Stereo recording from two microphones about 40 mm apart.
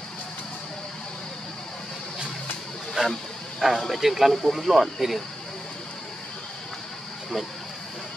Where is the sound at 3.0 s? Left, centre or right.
Centre.